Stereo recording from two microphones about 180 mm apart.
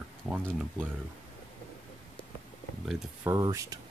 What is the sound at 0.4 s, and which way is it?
Speech, 5° left (ahead or behind).